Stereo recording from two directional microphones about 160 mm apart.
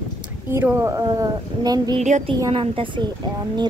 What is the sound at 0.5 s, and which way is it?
Speech, 15° right (ahead or behind).